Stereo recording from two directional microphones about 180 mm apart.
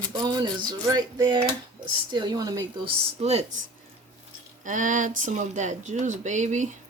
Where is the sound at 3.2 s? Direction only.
35° right (ahead or behind).